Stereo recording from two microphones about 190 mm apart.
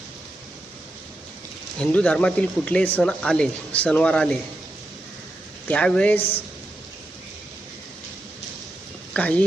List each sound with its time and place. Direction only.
1.8 s speech: 5° left (ahead or behind)
5.6 s speech: 5° left (ahead or behind)
6.1 s a woman's voice: 30° left (ahead or behind)
9.1 s speech: 5° left (ahead or behind)